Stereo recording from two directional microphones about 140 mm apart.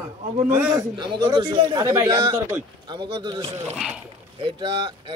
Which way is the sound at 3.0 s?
40° right (ahead or behind).